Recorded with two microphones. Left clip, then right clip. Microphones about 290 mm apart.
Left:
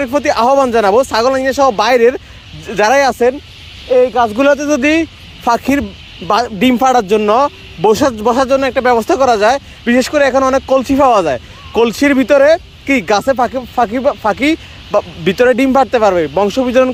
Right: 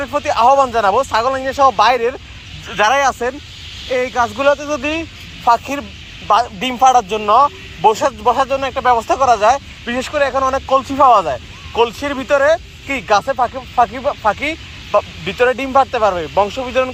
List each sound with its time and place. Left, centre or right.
0.0 s speech: left
3.8 s speech: centre
4.4 s speech: left